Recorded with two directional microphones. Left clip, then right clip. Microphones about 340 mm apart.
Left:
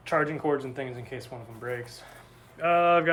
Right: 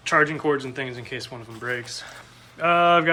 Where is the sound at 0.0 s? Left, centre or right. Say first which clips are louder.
Right 6 dB; centre.